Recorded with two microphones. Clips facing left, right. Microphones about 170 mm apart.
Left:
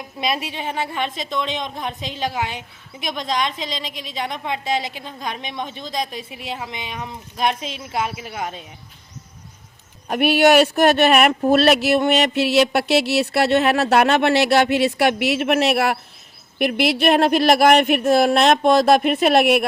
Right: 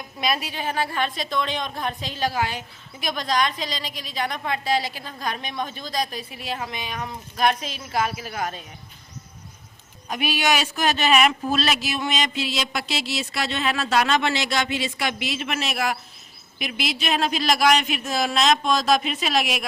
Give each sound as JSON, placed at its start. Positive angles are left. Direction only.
{"t": 0.2, "sound": "a woman's voice", "side_deg": 25}
{"t": 10.1, "sound": "speech", "side_deg": 60}